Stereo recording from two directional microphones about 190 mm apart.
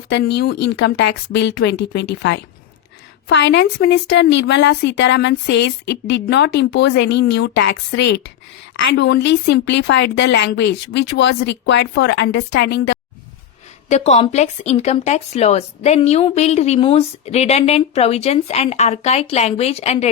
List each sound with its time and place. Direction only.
0.1 s speech: 65° left (ahead or behind)
13.9 s speech: 35° left (ahead or behind)